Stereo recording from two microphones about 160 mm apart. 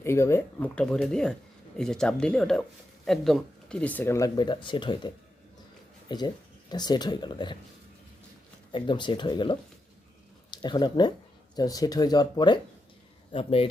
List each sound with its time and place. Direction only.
0.0 s speech: 15° left (ahead or behind)
8.7 s speech: 30° left (ahead or behind)